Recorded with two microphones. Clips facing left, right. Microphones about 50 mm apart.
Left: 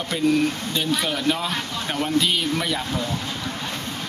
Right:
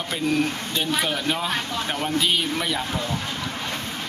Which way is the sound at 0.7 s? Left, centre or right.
Centre.